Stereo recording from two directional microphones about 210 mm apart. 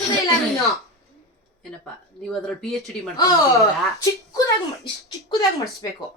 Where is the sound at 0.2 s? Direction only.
15° left (ahead or behind).